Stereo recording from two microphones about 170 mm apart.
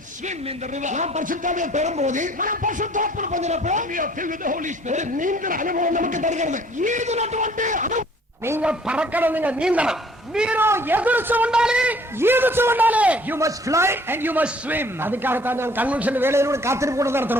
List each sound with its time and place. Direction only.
0.8 s a man's voice: 45° right (ahead or behind)
8.4 s a man's voice: 10° right (ahead or behind)